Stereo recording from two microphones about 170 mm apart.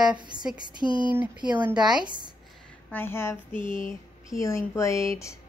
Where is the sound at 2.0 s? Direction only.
25° right (ahead or behind).